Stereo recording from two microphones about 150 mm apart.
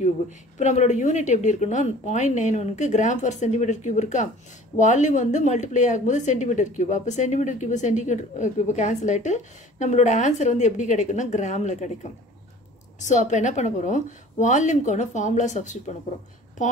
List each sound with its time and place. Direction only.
0.6 s a woman's voice: 50° left (ahead or behind)
13.0 s a woman's voice: 55° left (ahead or behind)